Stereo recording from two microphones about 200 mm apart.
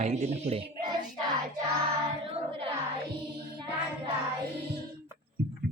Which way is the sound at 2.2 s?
30° right (ahead or behind).